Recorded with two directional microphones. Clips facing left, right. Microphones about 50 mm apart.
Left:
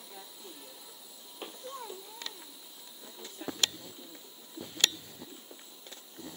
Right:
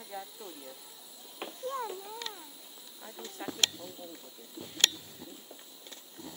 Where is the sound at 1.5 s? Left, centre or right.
Right.